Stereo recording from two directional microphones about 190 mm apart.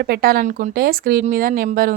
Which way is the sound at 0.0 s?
50° right (ahead or behind).